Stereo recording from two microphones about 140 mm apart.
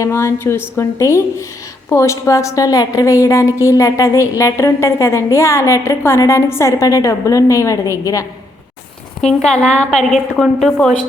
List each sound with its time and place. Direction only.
0.0 s a woman's voice: 20° left (ahead or behind)
9.4 s a woman's voice: 5° left (ahead or behind)